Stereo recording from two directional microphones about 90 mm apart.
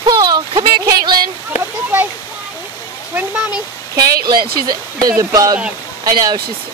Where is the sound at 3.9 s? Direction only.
45° right (ahead or behind).